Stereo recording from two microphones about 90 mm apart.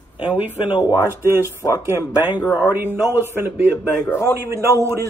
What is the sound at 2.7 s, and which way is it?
Speech, 25° right (ahead or behind).